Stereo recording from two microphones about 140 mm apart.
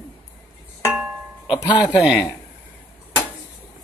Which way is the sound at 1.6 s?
30° left (ahead or behind).